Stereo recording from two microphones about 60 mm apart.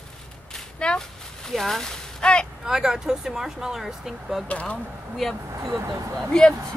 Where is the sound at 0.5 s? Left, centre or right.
Centre.